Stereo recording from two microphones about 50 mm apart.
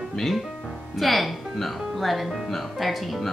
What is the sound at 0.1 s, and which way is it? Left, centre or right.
Speech, centre.